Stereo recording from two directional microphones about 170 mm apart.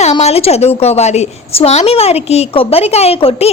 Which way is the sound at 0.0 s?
40° left (ahead or behind).